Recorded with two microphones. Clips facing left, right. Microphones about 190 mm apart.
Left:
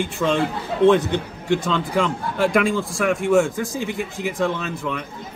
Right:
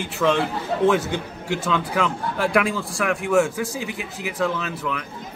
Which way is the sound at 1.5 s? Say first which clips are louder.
Left 3 dB; 5° right (ahead or behind).